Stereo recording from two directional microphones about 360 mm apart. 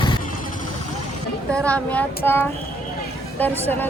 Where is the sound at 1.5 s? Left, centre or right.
Centre.